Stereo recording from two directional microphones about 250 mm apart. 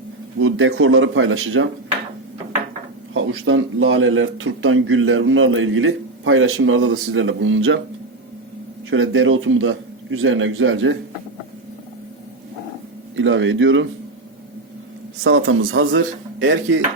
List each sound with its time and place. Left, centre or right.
0.3 s a man's voice: right
3.2 s a man's voice: right
8.9 s a man's voice: right
13.1 s a man's voice: right
15.2 s a man's voice: right